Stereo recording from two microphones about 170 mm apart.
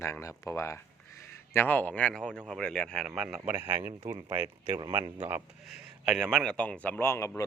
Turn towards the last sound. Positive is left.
turn(degrees=15)  # may be behind; listen again after turning